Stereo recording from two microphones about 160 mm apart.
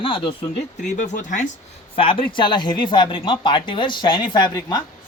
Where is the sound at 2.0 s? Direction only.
30° left (ahead or behind).